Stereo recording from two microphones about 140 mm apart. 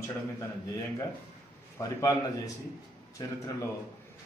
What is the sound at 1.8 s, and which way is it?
Speech, 25° left (ahead or behind).